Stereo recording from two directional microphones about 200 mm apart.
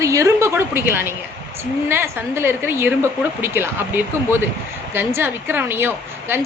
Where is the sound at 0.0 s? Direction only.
15° right (ahead or behind).